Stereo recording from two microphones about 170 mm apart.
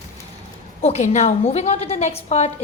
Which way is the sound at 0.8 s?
40° left (ahead or behind).